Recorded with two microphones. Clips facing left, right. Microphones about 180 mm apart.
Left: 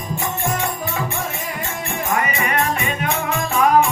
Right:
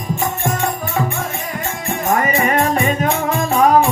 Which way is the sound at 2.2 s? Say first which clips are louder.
Right 5 dB; 45° right (ahead or behind).